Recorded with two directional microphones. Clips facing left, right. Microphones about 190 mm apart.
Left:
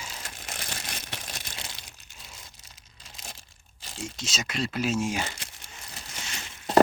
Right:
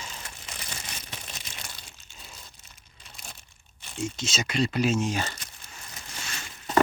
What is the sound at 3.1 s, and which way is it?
Crumpling, 90° left.